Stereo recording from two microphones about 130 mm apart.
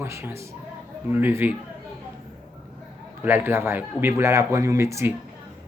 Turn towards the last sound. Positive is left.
turn(degrees=-20)  # may be behind; listen again after turning